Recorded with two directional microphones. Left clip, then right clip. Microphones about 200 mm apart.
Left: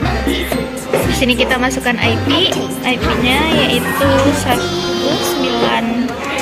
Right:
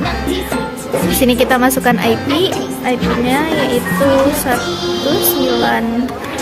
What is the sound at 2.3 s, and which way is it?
Music, 55° right (ahead or behind).